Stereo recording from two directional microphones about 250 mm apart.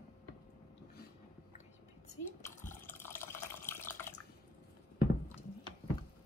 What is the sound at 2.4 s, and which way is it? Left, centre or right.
Water, centre.